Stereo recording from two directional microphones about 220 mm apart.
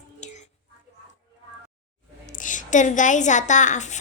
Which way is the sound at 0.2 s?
30° left (ahead or behind).